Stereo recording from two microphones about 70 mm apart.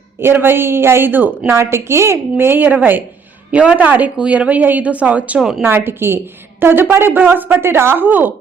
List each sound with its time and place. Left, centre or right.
0.2 s speech: right
5.4 s speech: centre
5.6 s speech: right